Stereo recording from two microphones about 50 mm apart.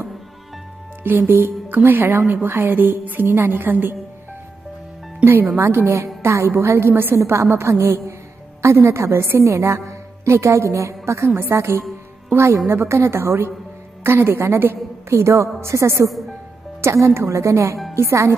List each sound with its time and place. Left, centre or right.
1.0 s a woman's voice: right
5.2 s a woman's voice: right
6.2 s a woman's voice: right
7.2 s a woman's voice: right
8.6 s a woman's voice: right
9.5 s a woman's voice: right
15.0 s a woman's voice: right
17.9 s a woman's voice: right